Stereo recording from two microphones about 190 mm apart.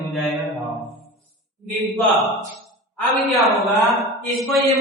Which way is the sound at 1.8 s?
Centre (ahead or behind).